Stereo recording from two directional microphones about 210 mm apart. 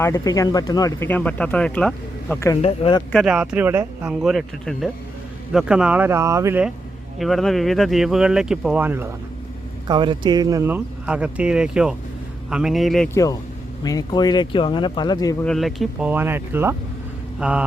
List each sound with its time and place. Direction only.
0.0 s speech: 15° left (ahead or behind)
2.6 s speech: 25° left (ahead or behind)
3.1 s speech: centre (ahead or behind)
9.8 s speech: 20° right (ahead or behind); by 13.1 s centre (ahead or behind)
13.1 s speech: 15° left (ahead or behind)
15.4 s speech: centre (ahead or behind)